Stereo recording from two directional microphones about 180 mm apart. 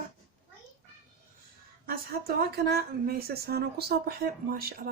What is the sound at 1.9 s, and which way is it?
Speech, 60° right (ahead or behind).